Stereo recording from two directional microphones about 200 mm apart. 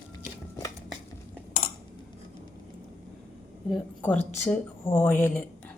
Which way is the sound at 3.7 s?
10° left (ahead or behind).